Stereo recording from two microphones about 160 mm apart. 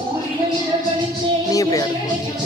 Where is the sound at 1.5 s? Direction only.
20° left (ahead or behind).